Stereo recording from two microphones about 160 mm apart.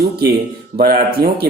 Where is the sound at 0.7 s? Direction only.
65° right (ahead or behind).